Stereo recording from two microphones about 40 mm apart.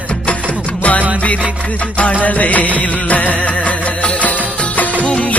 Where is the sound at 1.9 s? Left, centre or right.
Left.